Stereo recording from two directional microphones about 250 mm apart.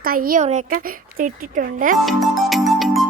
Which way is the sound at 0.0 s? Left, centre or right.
Right.